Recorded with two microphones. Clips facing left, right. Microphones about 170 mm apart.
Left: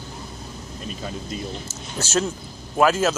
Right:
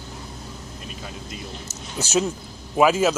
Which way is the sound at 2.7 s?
10° right (ahead or behind).